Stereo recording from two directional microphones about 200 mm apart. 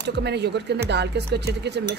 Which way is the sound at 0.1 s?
55° right (ahead or behind).